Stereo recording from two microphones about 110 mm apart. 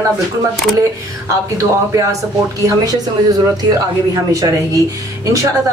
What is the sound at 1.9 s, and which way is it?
A woman's voice, 30° right (ahead or behind).